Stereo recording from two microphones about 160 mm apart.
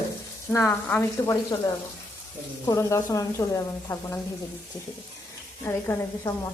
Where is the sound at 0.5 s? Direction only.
15° left (ahead or behind).